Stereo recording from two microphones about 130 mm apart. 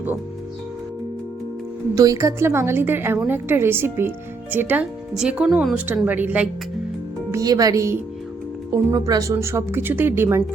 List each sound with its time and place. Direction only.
2.0 s a woman's voice: 25° right (ahead or behind)
7.3 s speech: 25° right (ahead or behind)